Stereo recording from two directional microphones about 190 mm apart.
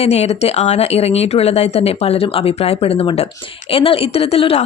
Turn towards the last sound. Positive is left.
turn(degrees=30)  # may be behind; listen again after turning